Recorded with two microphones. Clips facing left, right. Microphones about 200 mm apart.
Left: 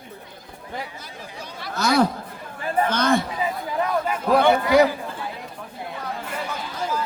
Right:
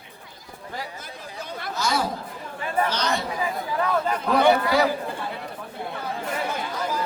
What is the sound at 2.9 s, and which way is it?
Chatter, 50° left (ahead or behind).